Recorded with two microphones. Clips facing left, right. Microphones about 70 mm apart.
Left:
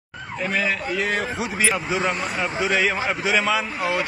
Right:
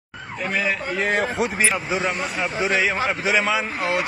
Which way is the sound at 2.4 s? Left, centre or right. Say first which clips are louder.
Even; centre.